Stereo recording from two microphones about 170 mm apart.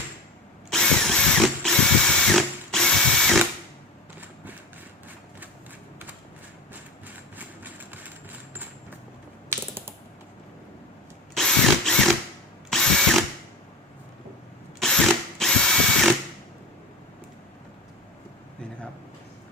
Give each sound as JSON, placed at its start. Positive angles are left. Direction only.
{"t": 0.7, "sound": "drill", "side_deg": 5}
{"t": 7.3, "sound": "train", "side_deg": -10}
{"t": 9.5, "sound": "typing", "side_deg": -15}
{"t": 11.3, "sound": "drill", "side_deg": 5}
{"t": 14.8, "sound": "drill", "side_deg": 0}